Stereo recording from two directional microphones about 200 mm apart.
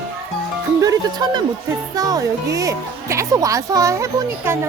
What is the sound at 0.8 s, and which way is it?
A woman's voice, 20° right (ahead or behind).